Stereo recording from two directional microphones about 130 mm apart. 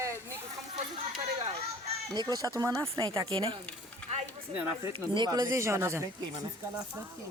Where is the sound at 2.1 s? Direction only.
30° right (ahead or behind).